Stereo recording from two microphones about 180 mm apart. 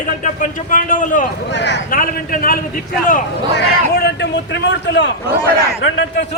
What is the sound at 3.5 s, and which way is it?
A man's voice, 65° left (ahead or behind).